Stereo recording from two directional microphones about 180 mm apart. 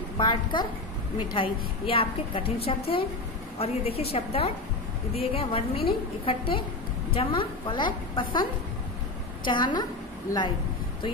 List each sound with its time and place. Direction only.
0.2 s a woman's voice: 25° left (ahead or behind)